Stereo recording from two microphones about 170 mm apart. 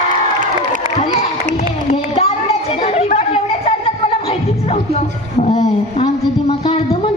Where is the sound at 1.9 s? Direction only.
40° left (ahead or behind).